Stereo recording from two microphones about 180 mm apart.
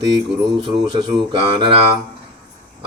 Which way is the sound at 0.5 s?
25° right (ahead or behind).